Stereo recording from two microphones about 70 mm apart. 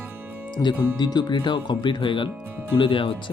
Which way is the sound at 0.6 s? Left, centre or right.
Left.